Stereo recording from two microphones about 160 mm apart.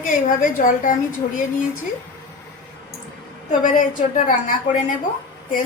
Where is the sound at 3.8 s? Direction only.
55° left (ahead or behind).